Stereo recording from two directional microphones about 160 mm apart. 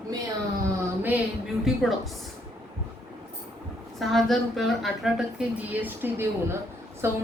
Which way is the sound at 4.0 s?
Centre (ahead or behind).